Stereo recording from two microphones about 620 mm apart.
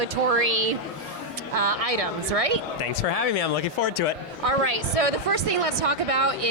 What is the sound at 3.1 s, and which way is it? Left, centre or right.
Speech, left.